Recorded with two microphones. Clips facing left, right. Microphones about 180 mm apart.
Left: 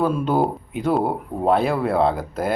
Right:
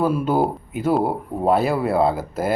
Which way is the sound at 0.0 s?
5° right (ahead or behind).